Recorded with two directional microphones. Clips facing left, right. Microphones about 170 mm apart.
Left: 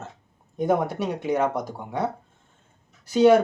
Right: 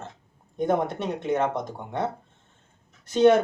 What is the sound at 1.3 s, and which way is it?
Speech, 25° right (ahead or behind).